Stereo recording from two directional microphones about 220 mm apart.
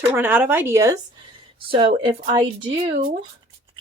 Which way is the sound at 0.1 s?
10° right (ahead or behind).